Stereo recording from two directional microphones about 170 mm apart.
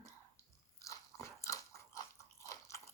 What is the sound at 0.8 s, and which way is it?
Biting, 15° left (ahead or behind).